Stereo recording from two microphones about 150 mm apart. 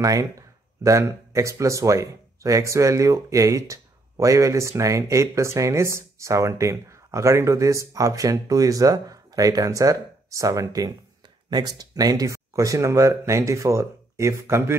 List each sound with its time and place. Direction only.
0.0 s speech: 25° right (ahead or behind)